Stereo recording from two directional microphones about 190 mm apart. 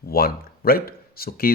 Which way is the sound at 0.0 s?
50° left (ahead or behind).